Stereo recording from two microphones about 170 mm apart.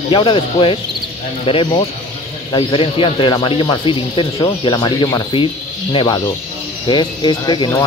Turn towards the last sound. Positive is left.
turn(degrees=25)  # may be behind; listen again after turning